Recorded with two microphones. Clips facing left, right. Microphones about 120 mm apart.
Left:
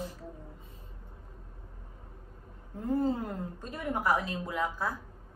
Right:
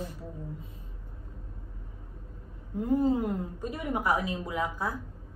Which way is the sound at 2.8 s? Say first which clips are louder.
Right 4 dB; 15° right (ahead or behind).